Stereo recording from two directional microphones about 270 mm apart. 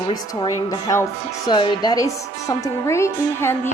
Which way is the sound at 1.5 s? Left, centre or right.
Centre.